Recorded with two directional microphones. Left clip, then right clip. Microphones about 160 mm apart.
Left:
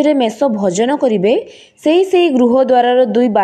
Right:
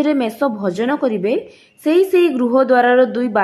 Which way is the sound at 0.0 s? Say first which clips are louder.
Left 4 dB; 25° left (ahead or behind).